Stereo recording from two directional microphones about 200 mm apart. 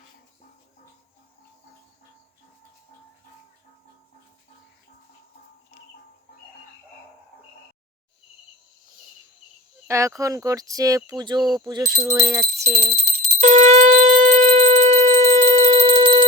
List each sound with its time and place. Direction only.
9.8 s speech: 15° right (ahead or behind)
13.4 s shofar: 35° right (ahead or behind)